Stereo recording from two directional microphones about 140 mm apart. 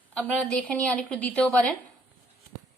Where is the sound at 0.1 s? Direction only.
10° left (ahead or behind).